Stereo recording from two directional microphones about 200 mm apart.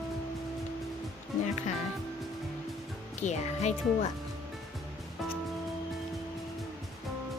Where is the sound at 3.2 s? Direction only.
35° left (ahead or behind).